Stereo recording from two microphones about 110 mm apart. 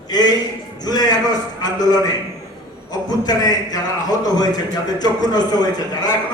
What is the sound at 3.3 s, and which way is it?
A man's voice, 35° left (ahead or behind).